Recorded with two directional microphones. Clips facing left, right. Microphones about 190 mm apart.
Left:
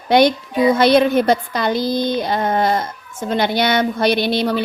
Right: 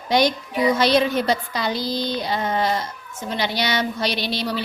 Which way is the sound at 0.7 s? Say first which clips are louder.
Left 6 dB; 55° left (ahead or behind).